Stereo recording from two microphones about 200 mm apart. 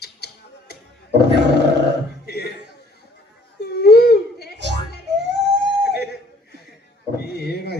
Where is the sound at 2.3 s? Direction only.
55° left (ahead or behind).